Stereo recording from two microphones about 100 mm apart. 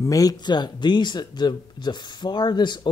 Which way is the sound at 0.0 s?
35° left (ahead or behind).